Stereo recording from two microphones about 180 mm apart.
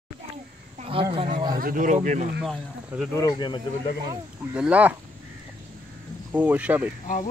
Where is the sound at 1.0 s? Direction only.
30° right (ahead or behind).